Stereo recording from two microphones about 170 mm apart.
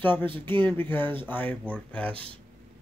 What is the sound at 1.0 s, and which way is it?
Speech, 30° right (ahead or behind).